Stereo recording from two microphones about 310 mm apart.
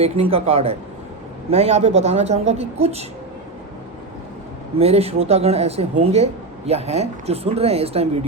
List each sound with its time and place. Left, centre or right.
0.0 s speech: centre
4.8 s speech: centre